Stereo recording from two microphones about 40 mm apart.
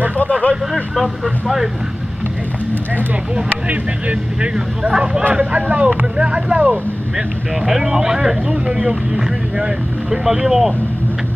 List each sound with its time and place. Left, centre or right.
0.2 s a sound: left
0.9 s speech: centre
3.6 s speech: right
7.2 s speech: centre
8.5 s speech: right
10.0 s speech: centre